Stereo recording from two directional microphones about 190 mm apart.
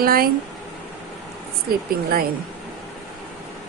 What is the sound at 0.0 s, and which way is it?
Speech, 50° right (ahead or behind).